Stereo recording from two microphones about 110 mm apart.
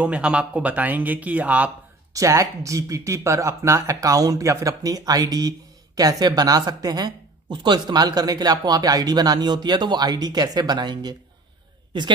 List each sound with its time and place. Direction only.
0.0 s speech: 10° right (ahead or behind)
2.1 s speech: 30° right (ahead or behind)